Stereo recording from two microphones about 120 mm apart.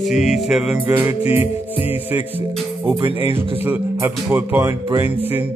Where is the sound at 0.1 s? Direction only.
Centre (ahead or behind).